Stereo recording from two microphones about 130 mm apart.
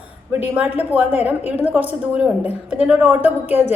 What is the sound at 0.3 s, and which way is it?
A woman's voice, 15° right (ahead or behind).